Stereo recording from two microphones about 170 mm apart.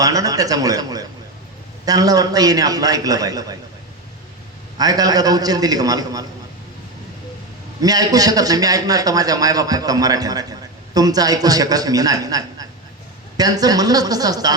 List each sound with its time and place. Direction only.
0.0 s a man's voice: 20° right (ahead or behind)
4.8 s a man's voice: 20° right (ahead or behind)
7.8 s a man's voice: 20° right (ahead or behind)